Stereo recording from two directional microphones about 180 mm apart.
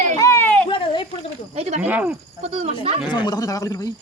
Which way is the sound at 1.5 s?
35° right (ahead or behind).